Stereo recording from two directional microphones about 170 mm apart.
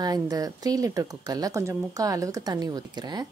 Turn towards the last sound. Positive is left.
turn(degrees=-25)  # may be behind; listen again after turning